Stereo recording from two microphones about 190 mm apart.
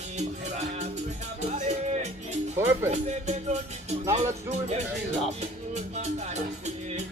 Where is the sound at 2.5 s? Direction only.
15° right (ahead or behind).